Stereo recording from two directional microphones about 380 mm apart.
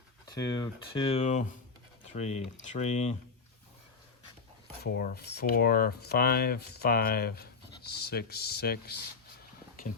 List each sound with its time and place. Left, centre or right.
0.3 s speech: centre
4.8 s speech: left